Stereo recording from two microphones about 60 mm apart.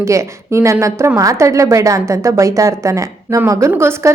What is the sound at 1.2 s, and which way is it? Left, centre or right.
A woman's voice, right.